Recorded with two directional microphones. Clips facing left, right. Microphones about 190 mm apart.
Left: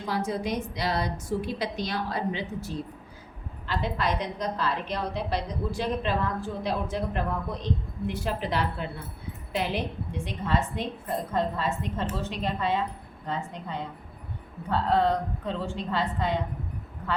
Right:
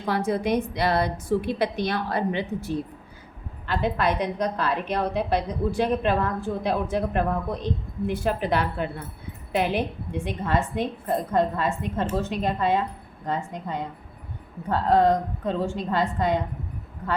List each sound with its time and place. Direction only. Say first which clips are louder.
0.0 s a woman's voice: right 4 dB; 60° right (ahead or behind)